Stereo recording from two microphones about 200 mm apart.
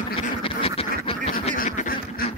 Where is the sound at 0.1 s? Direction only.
25° left (ahead or behind).